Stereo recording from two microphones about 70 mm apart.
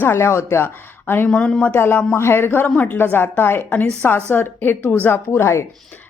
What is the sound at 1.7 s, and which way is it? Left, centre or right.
A woman's voice, left.